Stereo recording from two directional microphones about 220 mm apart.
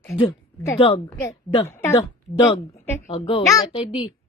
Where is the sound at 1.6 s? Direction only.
10° left (ahead or behind).